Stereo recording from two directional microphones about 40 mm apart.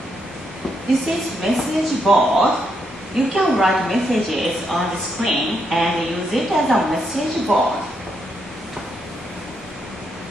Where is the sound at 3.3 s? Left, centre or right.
Centre.